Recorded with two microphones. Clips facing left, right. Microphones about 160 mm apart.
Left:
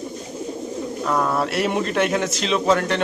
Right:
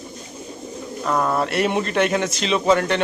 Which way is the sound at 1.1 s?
Centre (ahead or behind).